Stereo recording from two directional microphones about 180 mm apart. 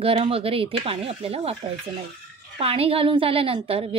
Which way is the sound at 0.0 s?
30° right (ahead or behind).